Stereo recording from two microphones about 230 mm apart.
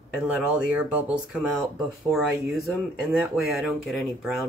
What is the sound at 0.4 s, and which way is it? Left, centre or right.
Speech, centre.